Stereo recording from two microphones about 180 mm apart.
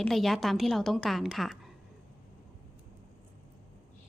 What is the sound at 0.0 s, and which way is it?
A woman's voice, centre (ahead or behind).